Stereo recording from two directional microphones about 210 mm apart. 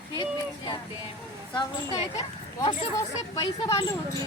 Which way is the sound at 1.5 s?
20° left (ahead or behind).